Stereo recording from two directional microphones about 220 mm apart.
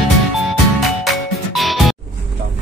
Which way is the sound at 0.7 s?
Centre (ahead or behind).